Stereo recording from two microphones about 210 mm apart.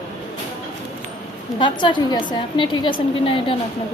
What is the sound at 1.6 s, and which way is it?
A woman's voice, 20° left (ahead or behind).